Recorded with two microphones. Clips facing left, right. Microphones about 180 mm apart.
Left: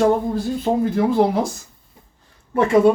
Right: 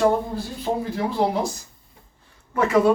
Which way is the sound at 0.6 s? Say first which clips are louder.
Left 5 dB; 50° left (ahead or behind).